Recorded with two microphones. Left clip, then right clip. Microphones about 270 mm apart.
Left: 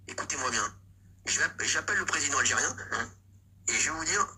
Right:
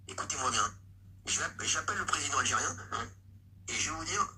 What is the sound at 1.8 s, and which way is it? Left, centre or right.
Speech, left.